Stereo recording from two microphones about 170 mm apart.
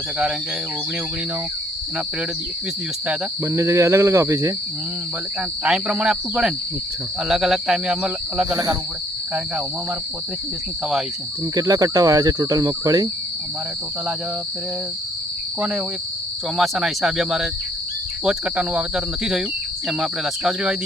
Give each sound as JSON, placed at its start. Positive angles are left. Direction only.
{"t": 3.1, "sound": "speech", "side_deg": -15}
{"t": 5.6, "sound": "speech", "side_deg": -5}
{"t": 8.5, "sound": "speech", "side_deg": -20}
{"t": 11.5, "sound": "speech", "side_deg": -20}
{"t": 16.6, "sound": "speech", "side_deg": -5}